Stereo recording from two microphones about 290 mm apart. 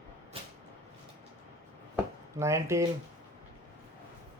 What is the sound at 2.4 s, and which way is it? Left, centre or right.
Speech, centre.